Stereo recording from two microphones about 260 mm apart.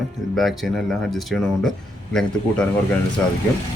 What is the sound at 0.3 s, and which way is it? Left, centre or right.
Speech, centre.